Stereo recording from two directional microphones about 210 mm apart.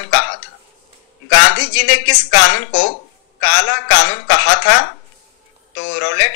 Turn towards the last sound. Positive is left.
turn(degrees=55)  # may be behind; listen again after turning